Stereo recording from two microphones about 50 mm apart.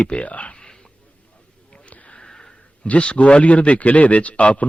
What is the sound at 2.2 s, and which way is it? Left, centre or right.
Sniff, centre.